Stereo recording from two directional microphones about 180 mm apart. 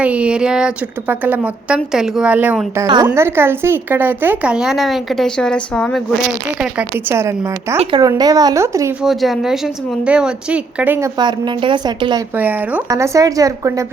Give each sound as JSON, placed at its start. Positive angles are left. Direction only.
{"t": 0.0, "sound": "a woman's voice", "side_deg": -5}
{"t": 2.8, "sound": "a woman's voice", "side_deg": -20}
{"t": 6.6, "sound": "a woman's voice", "side_deg": -10}
{"t": 7.8, "sound": "speech", "side_deg": -25}
{"t": 9.0, "sound": "a woman's voice", "side_deg": 0}
{"t": 11.2, "sound": "speech", "side_deg": -25}
{"t": 12.4, "sound": "a woman's voice", "side_deg": -10}